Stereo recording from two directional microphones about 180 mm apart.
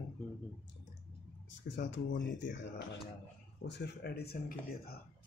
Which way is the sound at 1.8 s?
75° left (ahead or behind).